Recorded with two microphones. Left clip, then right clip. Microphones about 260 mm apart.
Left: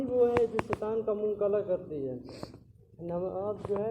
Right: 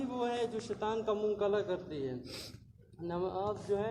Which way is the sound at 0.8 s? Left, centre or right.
Right.